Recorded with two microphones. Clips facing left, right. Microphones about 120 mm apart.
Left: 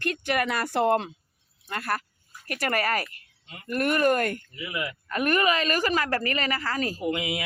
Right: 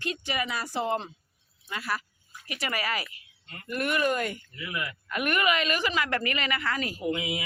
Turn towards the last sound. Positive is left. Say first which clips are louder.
# left 2 dB
turn(degrees=85)